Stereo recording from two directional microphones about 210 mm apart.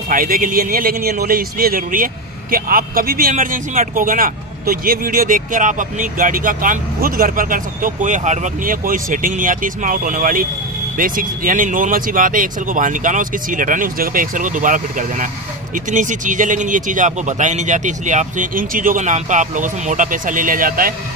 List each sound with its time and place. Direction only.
0.1 s speech: 40° right (ahead or behind)